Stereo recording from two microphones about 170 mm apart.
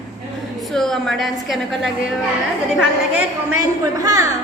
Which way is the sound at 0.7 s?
Centre (ahead or behind).